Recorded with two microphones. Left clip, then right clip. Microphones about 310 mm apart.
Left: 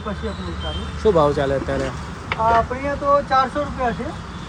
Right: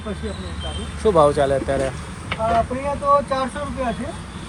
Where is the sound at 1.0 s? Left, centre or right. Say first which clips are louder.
Right 1 dB; centre.